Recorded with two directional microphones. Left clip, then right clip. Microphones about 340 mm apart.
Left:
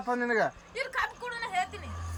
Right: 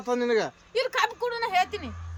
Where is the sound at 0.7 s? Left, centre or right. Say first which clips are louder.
Right 7 dB; right.